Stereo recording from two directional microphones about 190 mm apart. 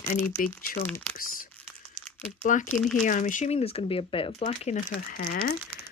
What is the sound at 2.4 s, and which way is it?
Speech, 40° left (ahead or behind).